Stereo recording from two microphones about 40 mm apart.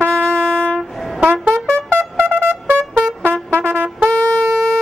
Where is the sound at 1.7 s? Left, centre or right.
Right.